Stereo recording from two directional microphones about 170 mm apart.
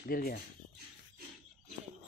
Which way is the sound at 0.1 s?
60° left (ahead or behind).